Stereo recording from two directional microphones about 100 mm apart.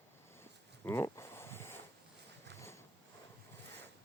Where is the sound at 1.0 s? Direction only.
30° left (ahead or behind).